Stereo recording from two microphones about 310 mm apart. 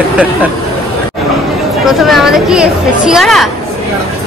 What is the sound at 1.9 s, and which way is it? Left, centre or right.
Speech, centre.